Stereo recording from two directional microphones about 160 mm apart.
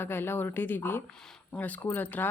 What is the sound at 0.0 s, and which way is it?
Speech, 15° left (ahead or behind).